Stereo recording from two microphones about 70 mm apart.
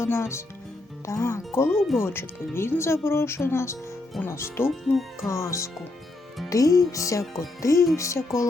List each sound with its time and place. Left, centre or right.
0.0 s speech: left
4.7 s speech: centre
5.3 s speech: left